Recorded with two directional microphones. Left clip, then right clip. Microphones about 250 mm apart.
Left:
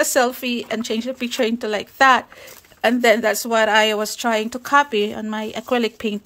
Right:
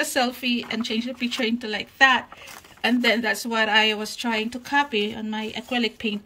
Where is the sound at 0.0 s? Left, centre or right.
Centre.